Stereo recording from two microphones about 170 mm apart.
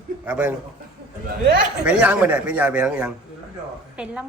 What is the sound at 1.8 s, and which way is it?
A woman's voice, 5° right (ahead or behind).